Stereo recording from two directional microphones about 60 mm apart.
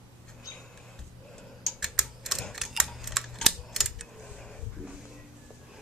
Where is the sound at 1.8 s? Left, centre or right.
Centre.